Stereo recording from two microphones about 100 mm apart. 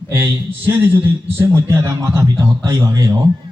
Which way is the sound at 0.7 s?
20° right (ahead or behind).